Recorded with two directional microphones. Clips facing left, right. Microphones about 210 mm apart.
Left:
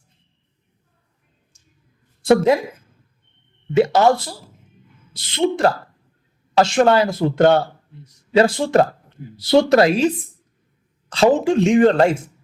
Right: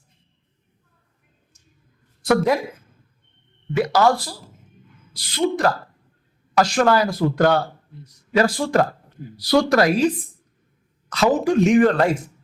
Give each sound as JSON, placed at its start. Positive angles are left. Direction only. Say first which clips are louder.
{"t": 1.5, "sound": "a sound", "louder": "right 2 dB", "side_deg": 30}
{"t": 2.2, "sound": "speech", "louder": "left 4 dB", "side_deg": 25}
{"t": 3.8, "sound": "speech", "louder": "left 3 dB", "side_deg": 25}
{"t": 11.1, "sound": "speech", "louder": "left 3 dB", "side_deg": 25}